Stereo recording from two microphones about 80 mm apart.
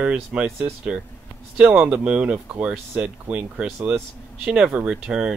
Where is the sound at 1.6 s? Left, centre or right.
Centre.